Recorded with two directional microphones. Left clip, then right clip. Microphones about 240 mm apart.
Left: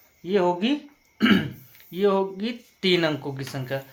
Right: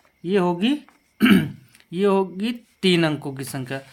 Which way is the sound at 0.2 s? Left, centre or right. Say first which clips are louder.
Right 1 dB; right.